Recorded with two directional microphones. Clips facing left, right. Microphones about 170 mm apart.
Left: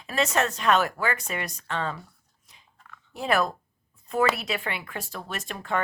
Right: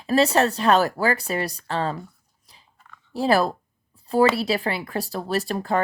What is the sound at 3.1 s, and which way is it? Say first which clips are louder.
Speech: right 5 dB; 35° right (ahead or behind).